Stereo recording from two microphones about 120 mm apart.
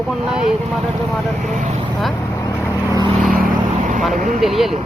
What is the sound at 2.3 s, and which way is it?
Vehicle, 30° left (ahead or behind).